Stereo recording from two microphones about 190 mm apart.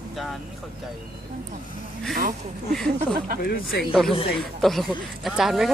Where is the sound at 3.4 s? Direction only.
50° left (ahead or behind).